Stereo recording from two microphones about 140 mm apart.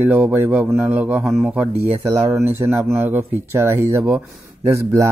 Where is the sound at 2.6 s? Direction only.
15° right (ahead or behind).